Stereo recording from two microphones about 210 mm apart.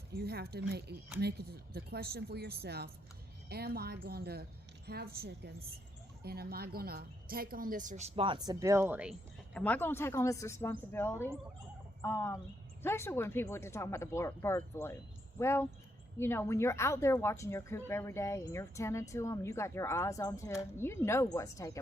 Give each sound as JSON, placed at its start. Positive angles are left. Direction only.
{"t": 0.1, "sound": "a woman's voice", "side_deg": -50}
{"t": 9.6, "sound": "a woman's voice", "side_deg": 5}